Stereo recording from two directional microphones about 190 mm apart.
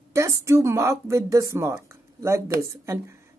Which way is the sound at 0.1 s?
15° right (ahead or behind).